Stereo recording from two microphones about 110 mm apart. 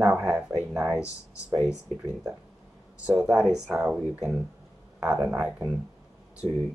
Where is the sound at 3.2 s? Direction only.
5° right (ahead or behind).